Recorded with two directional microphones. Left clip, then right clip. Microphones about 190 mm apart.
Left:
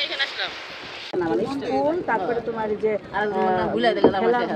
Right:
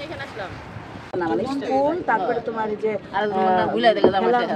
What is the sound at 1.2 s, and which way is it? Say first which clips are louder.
Speech: right 1 dB; 40° right (ahead or behind).